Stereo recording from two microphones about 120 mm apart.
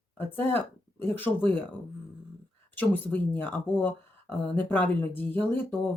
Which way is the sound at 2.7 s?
15° left (ahead or behind).